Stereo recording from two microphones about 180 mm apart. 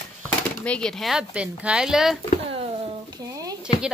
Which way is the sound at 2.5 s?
25° right (ahead or behind).